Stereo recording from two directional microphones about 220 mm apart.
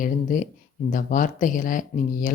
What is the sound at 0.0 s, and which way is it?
Speech, 35° left (ahead or behind).